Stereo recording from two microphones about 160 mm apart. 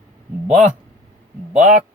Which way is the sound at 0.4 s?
50° right (ahead or behind).